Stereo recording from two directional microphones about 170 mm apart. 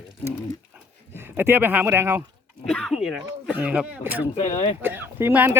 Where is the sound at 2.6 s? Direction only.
5° left (ahead or behind).